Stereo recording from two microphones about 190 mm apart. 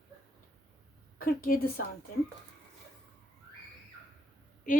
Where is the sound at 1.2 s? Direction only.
50° left (ahead or behind).